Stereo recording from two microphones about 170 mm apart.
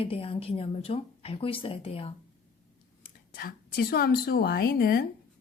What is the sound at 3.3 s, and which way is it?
A woman's voice, 60° left (ahead or behind).